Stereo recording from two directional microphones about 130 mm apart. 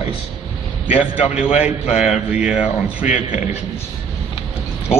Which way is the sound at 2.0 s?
10° right (ahead or behind).